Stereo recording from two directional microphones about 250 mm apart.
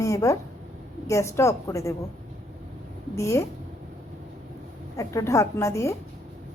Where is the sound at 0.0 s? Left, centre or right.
Centre.